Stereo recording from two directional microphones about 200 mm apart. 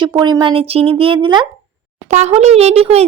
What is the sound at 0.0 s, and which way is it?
Speech, 20° right (ahead or behind).